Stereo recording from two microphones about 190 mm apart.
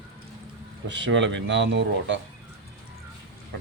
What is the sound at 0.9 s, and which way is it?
Speech, 70° right (ahead or behind).